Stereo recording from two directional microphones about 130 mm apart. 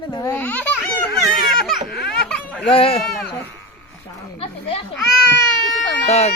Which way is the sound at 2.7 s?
45° left (ahead or behind).